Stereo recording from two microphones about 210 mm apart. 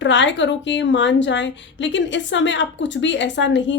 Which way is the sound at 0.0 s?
60° left (ahead or behind).